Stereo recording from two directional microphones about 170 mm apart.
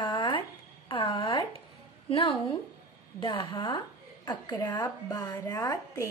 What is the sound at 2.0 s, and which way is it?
A woman's voice, 35° left (ahead or behind).